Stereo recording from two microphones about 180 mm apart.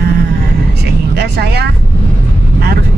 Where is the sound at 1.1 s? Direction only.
65° right (ahead or behind).